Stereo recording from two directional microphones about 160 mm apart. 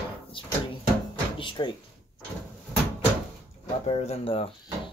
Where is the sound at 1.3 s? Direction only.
30° left (ahead or behind).